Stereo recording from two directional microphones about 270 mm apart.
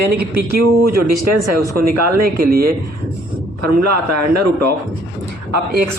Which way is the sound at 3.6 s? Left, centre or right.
Right.